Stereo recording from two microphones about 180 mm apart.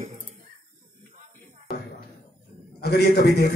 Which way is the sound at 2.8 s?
65° left (ahead or behind).